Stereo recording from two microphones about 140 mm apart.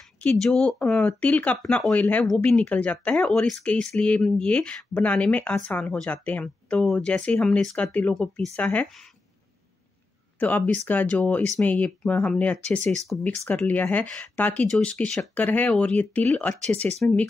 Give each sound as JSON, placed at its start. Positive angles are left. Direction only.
{"t": 0.2, "sound": "speech", "side_deg": 5}
{"t": 10.4, "sound": "speech", "side_deg": 10}